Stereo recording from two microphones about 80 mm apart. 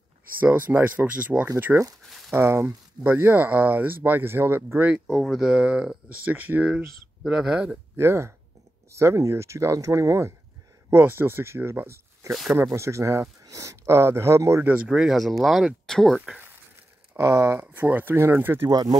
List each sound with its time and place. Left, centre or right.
0.4 s speech: right
1.6 s speech: right
4.8 s speech: centre
5.1 s speech: centre
5.4 s speech: centre
7.9 s speech: right
10.9 s speech: right
12.3 s speech: centre
12.7 s speech: right
14.9 s speech: centre
17.2 s speech: right
18.7 s speech: right